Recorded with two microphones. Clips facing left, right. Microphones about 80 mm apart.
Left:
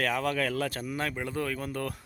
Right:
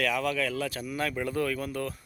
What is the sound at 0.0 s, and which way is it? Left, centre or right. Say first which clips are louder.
Speech: even; left.